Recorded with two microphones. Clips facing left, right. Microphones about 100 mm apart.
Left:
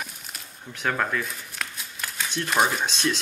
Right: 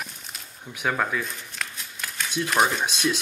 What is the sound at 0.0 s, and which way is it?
Shuffling cards, centre (ahead or behind).